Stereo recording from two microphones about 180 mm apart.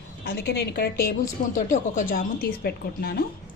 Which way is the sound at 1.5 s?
45° left (ahead or behind).